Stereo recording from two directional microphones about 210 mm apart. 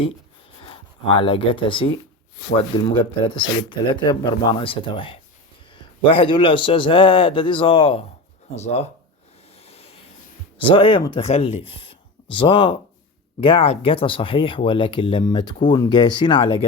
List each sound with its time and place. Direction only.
0.6 s speech: 25° left (ahead or behind)
9.6 s vehicle: 30° left (ahead or behind)
10.8 s speech: 25° left (ahead or behind)